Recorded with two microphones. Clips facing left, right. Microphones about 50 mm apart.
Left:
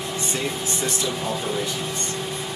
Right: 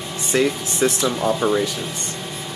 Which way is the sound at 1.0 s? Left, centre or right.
Right.